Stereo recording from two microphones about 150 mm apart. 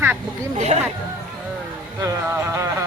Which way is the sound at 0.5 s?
50° right (ahead or behind).